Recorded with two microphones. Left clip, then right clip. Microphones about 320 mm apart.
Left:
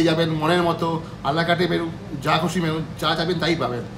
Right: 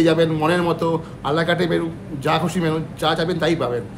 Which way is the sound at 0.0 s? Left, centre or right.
Centre.